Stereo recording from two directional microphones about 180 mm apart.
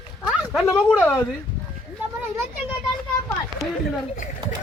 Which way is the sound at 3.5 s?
30° right (ahead or behind).